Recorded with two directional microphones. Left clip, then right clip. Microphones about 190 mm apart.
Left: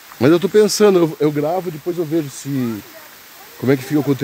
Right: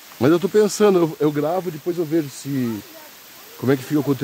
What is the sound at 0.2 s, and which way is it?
Speech, 10° left (ahead or behind).